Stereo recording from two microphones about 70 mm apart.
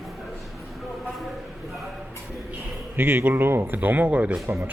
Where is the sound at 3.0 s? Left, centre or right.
Right.